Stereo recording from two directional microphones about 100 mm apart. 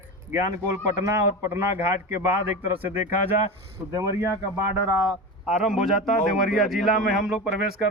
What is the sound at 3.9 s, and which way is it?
Speech, 30° right (ahead or behind).